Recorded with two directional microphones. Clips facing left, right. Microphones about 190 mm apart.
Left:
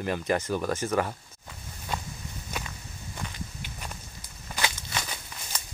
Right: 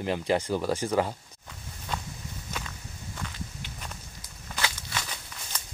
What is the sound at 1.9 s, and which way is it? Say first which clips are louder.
Walk: left 1 dB; 10° left (ahead or behind).